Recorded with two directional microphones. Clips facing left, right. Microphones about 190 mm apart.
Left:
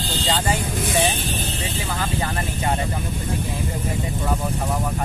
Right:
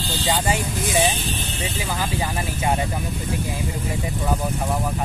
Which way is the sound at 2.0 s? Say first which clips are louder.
Even; 10° right (ahead or behind).